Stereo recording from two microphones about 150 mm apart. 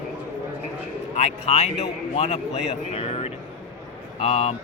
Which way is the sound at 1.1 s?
45° left (ahead or behind).